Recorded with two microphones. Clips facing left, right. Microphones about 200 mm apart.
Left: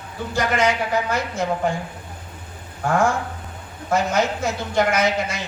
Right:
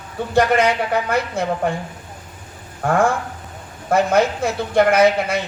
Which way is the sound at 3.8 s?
60° right (ahead or behind).